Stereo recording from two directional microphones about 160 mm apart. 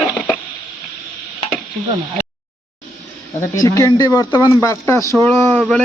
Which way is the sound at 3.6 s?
20° left (ahead or behind).